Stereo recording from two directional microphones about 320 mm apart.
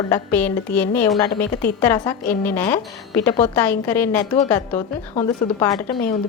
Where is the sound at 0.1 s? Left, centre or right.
Centre.